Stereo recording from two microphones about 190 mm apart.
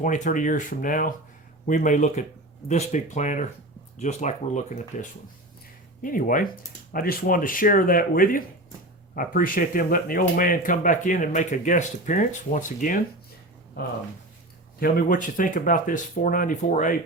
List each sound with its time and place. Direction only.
0.0 s speech: 45° left (ahead or behind)
14.8 s speech: 50° left (ahead or behind)